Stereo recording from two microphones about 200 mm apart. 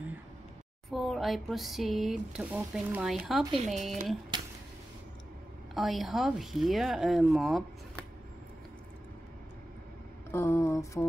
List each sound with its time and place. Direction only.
0.8 s speech: centre (ahead or behind)
3.5 s speech: 35° right (ahead or behind)
4.3 s a sound: 20° right (ahead or behind)
5.8 s speech: centre (ahead or behind)
10.3 s mantra: 10° left (ahead or behind)